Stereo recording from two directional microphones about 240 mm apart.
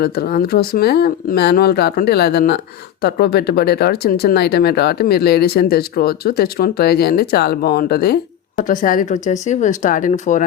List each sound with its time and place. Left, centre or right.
0.0 s speech: left